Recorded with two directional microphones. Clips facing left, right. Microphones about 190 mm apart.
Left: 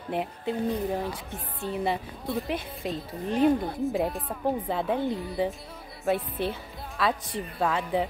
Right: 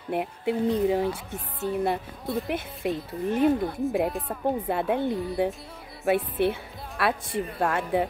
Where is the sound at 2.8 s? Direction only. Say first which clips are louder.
Right 4 dB; 60° right (ahead or behind).